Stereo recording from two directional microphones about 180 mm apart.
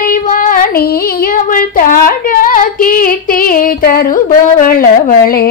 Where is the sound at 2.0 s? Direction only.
50° left (ahead or behind).